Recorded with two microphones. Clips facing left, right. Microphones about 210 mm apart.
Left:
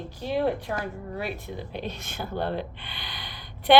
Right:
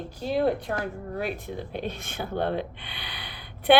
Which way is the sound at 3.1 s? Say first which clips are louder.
Even; 60° right (ahead or behind).